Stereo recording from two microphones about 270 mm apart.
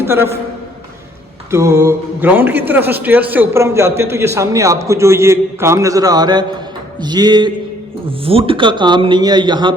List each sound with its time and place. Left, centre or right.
0.0 s a man's voice: centre
1.5 s speech: centre